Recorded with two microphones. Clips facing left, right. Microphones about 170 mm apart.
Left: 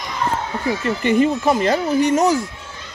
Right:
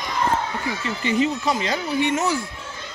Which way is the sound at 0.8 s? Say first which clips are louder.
Left 5 dB; 55° left (ahead or behind).